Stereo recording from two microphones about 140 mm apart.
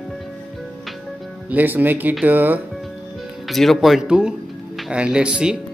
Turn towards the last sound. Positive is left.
turn(degrees=-5)  # may be behind; listen again after turning